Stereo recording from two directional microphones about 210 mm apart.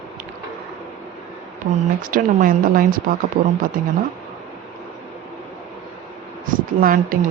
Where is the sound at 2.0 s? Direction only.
40° right (ahead or behind).